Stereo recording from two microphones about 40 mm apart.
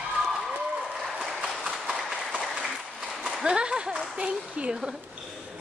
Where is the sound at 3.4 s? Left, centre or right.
Right.